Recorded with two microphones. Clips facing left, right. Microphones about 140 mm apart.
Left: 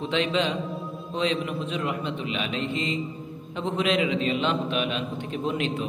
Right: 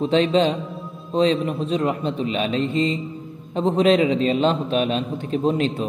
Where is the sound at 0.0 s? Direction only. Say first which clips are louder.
Right 7 dB; 35° right (ahead or behind).